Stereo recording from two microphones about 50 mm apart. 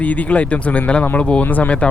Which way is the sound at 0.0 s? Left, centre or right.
Left.